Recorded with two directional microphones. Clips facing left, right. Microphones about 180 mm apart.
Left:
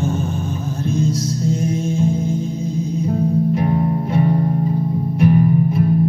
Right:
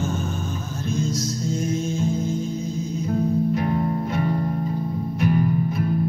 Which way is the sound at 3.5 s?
25° left (ahead or behind).